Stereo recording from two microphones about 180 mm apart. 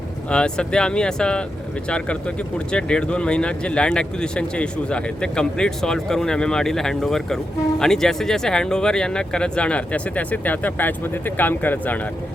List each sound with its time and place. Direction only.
0.3 s speech: 5° left (ahead or behind)